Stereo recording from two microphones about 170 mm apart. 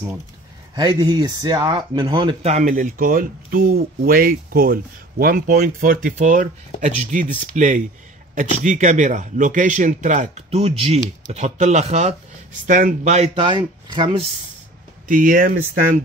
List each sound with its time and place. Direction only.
0.7 s speech: 25° right (ahead or behind)
2.4 s speech: 45° right (ahead or behind)
12.6 s speech: 50° right (ahead or behind); by 14.2 s 25° right (ahead or behind)
15.0 s speech: 50° right (ahead or behind)